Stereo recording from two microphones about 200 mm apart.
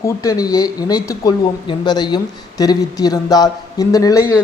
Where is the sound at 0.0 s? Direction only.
15° left (ahead or behind).